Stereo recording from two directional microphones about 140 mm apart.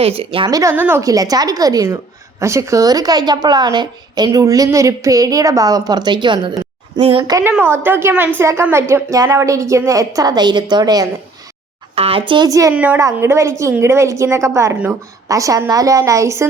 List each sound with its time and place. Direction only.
0.0 s speech: 45° right (ahead or behind)
0.5 s speech: 20° right (ahead or behind)
1.0 s a woman's voice: 25° right (ahead or behind)
7.9 s a woman's voice: 15° right (ahead or behind)
11.9 s speech: 45° right (ahead or behind)
12.3 s a woman's voice: 30° right (ahead or behind)
12.7 s speech: 10° right (ahead or behind)
13.0 s a woman's voice: 20° right (ahead or behind)